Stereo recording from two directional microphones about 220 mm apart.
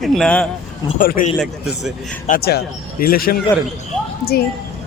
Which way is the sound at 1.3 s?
Centre (ahead or behind).